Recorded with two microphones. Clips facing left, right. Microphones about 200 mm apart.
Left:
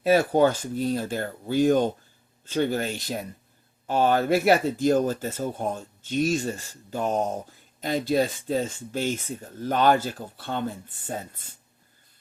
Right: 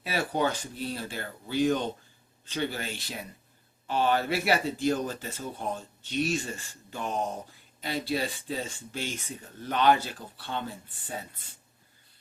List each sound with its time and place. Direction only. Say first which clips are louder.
0.0 s speech: left 9 dB; 45° left (ahead or behind)